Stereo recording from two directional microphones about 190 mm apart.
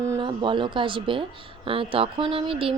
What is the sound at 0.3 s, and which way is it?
Speech, 25° right (ahead or behind).